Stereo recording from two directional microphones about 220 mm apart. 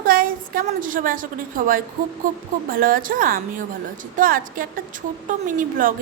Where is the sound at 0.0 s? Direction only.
40° right (ahead or behind).